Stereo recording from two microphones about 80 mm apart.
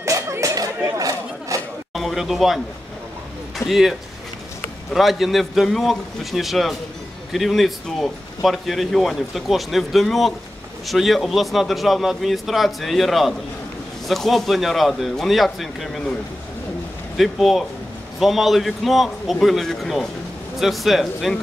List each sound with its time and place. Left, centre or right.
0.0 s a sound: right
2.0 s a man's voice: centre
4.9 s a man's voice: centre
17.2 s a man's voice: centre